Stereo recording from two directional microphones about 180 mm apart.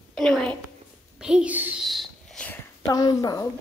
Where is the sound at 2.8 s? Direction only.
20° left (ahead or behind).